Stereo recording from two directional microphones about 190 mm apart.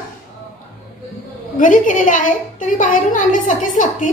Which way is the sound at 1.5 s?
45° left (ahead or behind).